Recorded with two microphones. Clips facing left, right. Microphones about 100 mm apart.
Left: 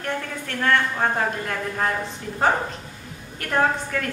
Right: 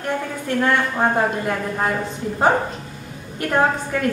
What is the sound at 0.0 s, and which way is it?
A woman's voice, 15° right (ahead or behind).